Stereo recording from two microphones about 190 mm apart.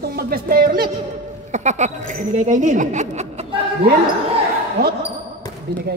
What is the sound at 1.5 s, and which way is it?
Speech, 40° right (ahead or behind).